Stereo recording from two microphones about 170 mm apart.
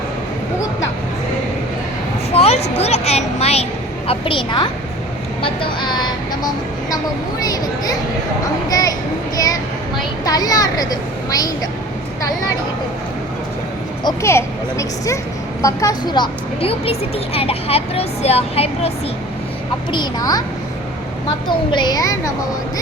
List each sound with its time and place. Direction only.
2.3 s a sound: 35° left (ahead or behind)
5.4 s a woman's voice: 30° left (ahead or behind)
14.0 s a woman's voice: 20° left (ahead or behind)
19.9 s a woman's voice: 25° left (ahead or behind)
21.4 s a woman's voice: 25° left (ahead or behind)